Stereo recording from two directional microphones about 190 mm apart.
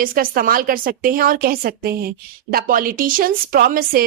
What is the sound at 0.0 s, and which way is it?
A woman's voice, 50° right (ahead or behind).